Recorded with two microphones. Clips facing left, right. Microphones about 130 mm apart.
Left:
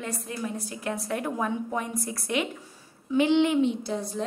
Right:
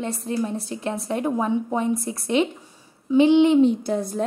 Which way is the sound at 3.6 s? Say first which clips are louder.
Right 7 dB; 50° right (ahead or behind).